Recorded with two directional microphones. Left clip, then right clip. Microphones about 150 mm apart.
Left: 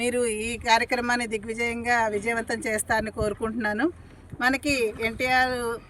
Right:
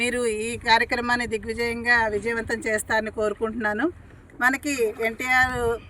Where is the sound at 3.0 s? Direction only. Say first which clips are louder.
Right 3 dB; 25° left (ahead or behind).